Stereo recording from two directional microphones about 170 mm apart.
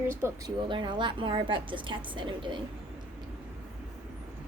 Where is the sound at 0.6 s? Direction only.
30° right (ahead or behind).